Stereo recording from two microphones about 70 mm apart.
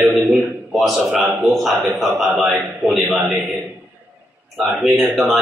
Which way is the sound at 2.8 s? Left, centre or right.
Centre.